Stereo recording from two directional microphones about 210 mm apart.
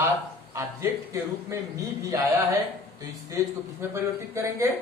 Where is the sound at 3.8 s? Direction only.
10° right (ahead or behind).